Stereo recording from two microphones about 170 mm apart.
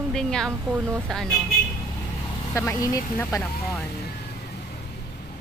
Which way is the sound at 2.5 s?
15° left (ahead or behind).